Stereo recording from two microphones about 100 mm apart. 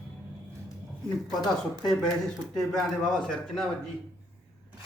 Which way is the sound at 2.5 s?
5° left (ahead or behind).